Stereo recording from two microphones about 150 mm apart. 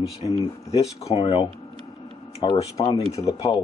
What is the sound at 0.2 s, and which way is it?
Speech, 35° left (ahead or behind).